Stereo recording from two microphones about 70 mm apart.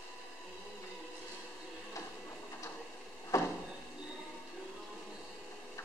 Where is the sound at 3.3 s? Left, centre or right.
Left.